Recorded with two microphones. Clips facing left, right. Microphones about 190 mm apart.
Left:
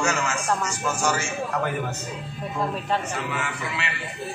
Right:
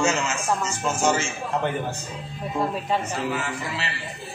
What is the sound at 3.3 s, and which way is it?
Speech, 35° right (ahead or behind).